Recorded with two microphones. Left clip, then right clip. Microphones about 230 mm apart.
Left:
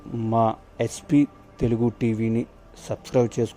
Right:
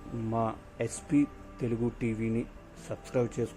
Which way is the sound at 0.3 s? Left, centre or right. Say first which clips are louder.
Left 10 dB; left.